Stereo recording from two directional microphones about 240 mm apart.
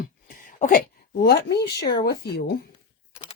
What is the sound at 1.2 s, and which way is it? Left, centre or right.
Speech, left.